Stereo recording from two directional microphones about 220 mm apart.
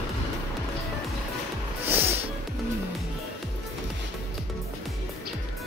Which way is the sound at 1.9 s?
10° right (ahead or behind).